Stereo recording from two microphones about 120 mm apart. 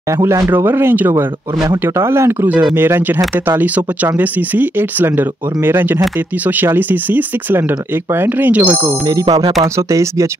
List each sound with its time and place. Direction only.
0.2 s speech: 25° right (ahead or behind)
8.8 s speech: 30° right (ahead or behind)